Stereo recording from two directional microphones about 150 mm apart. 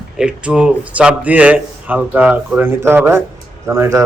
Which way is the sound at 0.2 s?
5° right (ahead or behind).